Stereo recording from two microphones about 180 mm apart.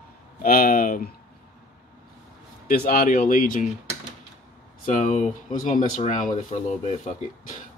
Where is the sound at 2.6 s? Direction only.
55° left (ahead or behind).